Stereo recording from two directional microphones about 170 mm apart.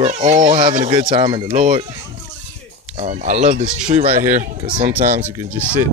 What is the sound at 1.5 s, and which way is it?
Speech, 45° right (ahead or behind).